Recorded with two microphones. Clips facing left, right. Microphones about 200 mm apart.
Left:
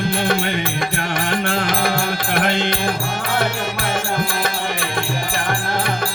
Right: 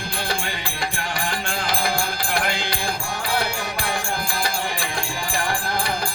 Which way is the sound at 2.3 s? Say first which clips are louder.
Left 7 dB; 20° left (ahead or behind).